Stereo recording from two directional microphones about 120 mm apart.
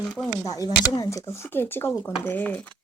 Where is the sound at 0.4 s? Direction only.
30° left (ahead or behind).